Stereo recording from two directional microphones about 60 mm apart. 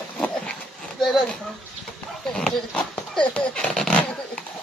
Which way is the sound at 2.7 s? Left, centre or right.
Centre.